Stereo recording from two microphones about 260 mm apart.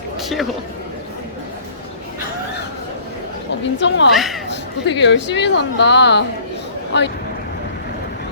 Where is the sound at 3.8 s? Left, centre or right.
Left.